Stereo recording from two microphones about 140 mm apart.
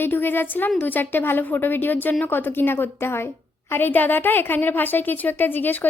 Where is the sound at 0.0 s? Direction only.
15° left (ahead or behind).